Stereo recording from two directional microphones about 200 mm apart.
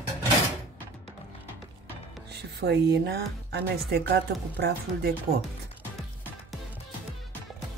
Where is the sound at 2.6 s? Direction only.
55° right (ahead or behind).